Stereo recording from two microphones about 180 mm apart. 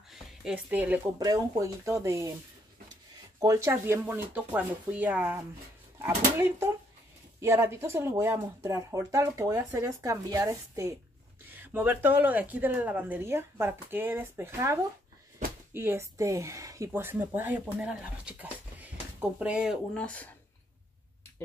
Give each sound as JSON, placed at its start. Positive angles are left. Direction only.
{"t": 0.1, "sound": "a sound", "side_deg": 0}
{"t": 1.2, "sound": "speech", "side_deg": -20}
{"t": 3.3, "sound": "speech", "side_deg": -20}
{"t": 19.9, "sound": "speech", "side_deg": 5}